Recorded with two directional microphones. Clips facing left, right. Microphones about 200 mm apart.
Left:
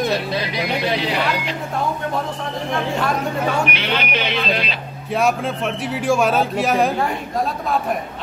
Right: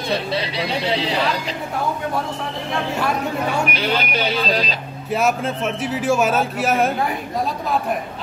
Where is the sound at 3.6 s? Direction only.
40° right (ahead or behind).